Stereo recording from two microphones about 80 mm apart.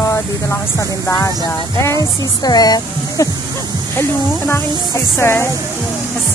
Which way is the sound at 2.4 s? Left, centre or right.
Left.